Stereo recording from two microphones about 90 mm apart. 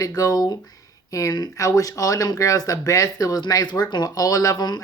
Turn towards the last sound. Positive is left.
turn(degrees=45)  # may be behind; listen again after turning